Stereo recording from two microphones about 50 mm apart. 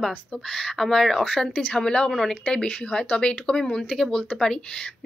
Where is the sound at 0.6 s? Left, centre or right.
Centre.